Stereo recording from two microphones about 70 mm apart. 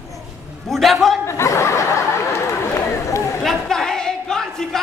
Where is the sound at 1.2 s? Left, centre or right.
Left.